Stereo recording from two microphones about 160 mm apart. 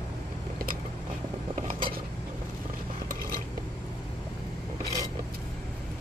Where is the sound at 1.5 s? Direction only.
50° right (ahead or behind).